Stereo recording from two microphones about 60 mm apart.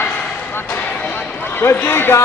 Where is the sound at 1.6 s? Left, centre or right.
Left.